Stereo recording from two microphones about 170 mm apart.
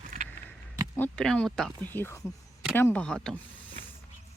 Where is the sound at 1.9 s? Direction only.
15° left (ahead or behind).